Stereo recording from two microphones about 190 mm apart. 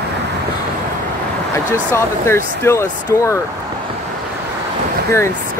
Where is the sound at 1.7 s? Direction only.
15° left (ahead or behind).